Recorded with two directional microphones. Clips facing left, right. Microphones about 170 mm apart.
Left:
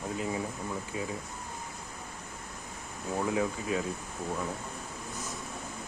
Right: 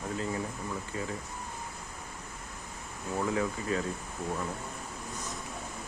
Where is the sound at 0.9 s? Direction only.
15° left (ahead or behind).